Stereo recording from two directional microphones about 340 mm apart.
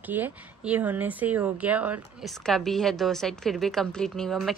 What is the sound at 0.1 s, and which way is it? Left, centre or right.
A woman's voice, centre.